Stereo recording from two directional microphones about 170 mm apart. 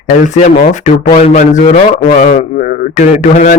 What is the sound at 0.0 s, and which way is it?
Speech, 45° left (ahead or behind).